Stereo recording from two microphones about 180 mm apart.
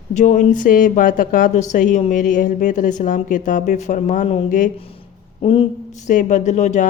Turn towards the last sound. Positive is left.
turn(degrees=40)  # may be behind; listen again after turning